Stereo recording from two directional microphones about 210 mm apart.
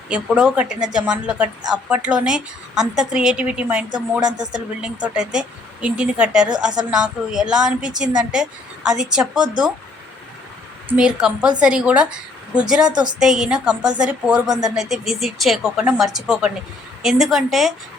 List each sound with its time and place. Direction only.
0.1 s a woman's voice: 5° right (ahead or behind)
10.8 s a woman's voice: 5° right (ahead or behind)
12.9 s a woman's voice: 20° right (ahead or behind)
13.1 s a woman's voice: centre (ahead or behind)